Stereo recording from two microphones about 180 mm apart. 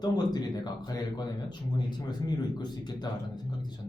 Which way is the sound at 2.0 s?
25° left (ahead or behind).